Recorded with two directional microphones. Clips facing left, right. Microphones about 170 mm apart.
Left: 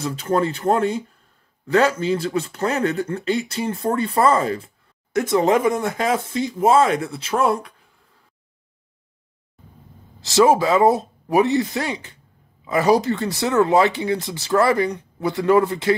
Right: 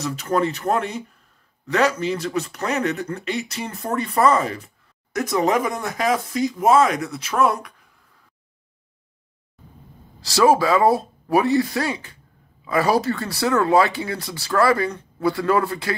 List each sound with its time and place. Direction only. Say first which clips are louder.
0.0 s speech: left 1 dB; 30° left (ahead or behind)
10.2 s speech: left 1 dB; 20° left (ahead or behind)